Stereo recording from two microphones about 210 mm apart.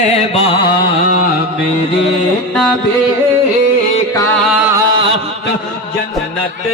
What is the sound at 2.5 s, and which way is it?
Carnatic music, centre (ahead or behind).